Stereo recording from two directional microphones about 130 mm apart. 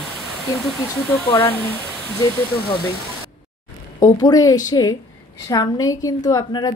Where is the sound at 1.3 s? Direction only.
40° left (ahead or behind).